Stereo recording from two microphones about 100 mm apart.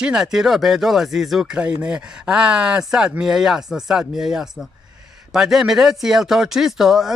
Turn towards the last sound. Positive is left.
turn(degrees=-5)  # may be behind; listen again after turning